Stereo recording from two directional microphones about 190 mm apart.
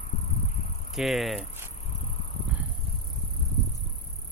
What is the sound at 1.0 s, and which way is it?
Speech, centre (ahead or behind).